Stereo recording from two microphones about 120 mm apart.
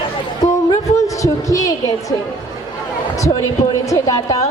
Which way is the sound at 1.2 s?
25° left (ahead or behind).